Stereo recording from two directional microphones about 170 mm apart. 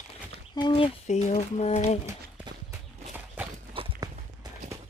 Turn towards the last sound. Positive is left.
turn(degrees=-30)  # may be behind; listen again after turning